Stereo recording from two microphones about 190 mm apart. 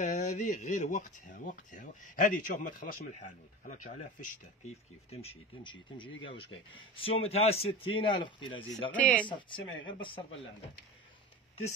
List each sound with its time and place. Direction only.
0.0 s speech: 40° left (ahead or behind); by 8.5 s 25° left (ahead or behind)
8.9 s speech: 5° left (ahead or behind)
9.3 s speech: 25° left (ahead or behind)